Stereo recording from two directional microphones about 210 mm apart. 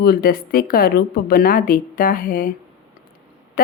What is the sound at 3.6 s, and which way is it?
Speech, 40° left (ahead or behind).